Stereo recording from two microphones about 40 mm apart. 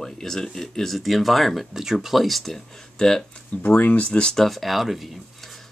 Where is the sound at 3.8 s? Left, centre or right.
Left.